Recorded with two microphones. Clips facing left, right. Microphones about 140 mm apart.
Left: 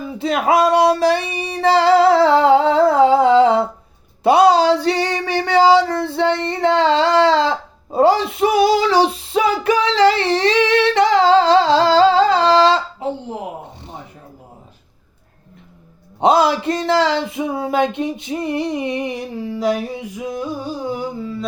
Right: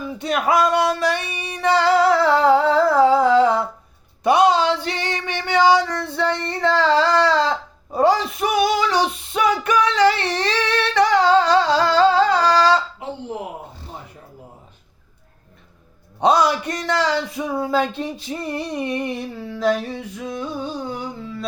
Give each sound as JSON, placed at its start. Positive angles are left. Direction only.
{"t": 0.2, "sound": "music", "side_deg": 25}
{"t": 4.2, "sound": "female singing", "side_deg": 30}
{"t": 16.2, "sound": "speech", "side_deg": 25}
{"t": 19.3, "sound": "a sound", "side_deg": 15}